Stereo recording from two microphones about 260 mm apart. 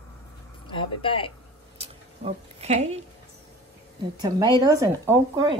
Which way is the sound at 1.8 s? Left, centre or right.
Right.